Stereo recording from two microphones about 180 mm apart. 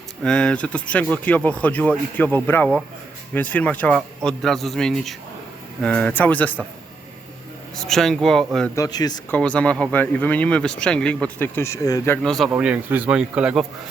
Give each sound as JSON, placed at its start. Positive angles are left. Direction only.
{"t": 0.2, "sound": "a man's voice", "side_deg": 5}
{"t": 7.8, "sound": "a man's voice", "side_deg": 0}
{"t": 8.7, "sound": "speech", "side_deg": 20}
{"t": 9.3, "sound": "speech", "side_deg": 5}
{"t": 12.2, "sound": "a man's voice", "side_deg": 5}
{"t": 12.5, "sound": "speech", "side_deg": -10}